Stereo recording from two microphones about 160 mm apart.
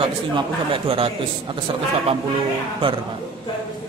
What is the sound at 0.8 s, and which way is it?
Speech, 35° right (ahead or behind).